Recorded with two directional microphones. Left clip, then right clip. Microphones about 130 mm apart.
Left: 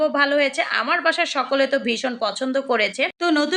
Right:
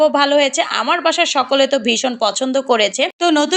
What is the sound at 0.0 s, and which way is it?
A woman's voice, 35° right (ahead or behind).